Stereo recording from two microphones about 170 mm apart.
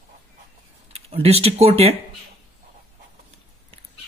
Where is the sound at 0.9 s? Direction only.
35° right (ahead or behind).